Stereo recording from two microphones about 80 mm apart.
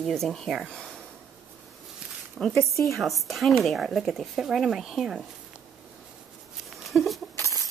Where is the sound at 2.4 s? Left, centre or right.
Centre.